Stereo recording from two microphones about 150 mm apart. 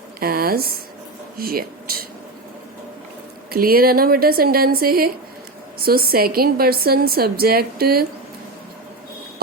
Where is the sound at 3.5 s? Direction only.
80° right.